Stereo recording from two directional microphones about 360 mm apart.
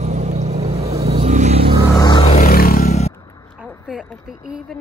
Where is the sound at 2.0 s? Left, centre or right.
Centre.